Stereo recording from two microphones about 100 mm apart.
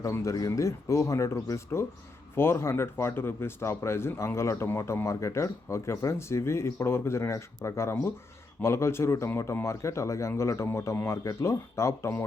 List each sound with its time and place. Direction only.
0.0 s speech: 35° left (ahead or behind)